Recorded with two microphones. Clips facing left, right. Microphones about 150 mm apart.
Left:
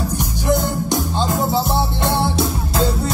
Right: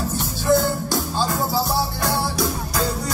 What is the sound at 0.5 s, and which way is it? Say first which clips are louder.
Music: even; 20° left (ahead or behind).